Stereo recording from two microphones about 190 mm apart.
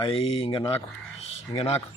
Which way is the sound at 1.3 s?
35° left (ahead or behind).